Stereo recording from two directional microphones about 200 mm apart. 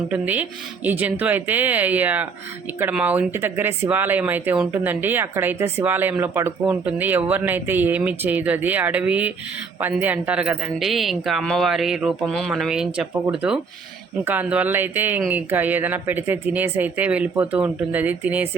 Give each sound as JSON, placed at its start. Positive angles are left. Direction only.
{"t": 0.1, "sound": "speech", "side_deg": -10}